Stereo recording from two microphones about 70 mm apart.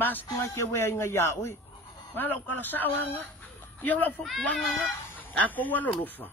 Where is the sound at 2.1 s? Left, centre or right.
Left.